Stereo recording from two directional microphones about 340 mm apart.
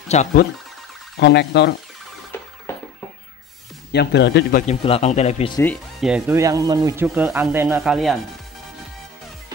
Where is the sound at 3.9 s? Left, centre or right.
Left.